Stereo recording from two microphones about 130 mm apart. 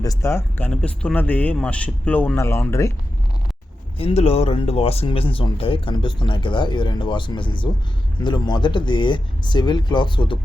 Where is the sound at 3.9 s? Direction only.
50° left (ahead or behind).